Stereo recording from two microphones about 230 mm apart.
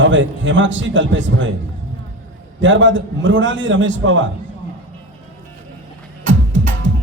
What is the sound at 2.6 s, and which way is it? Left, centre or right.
A man's voice, right.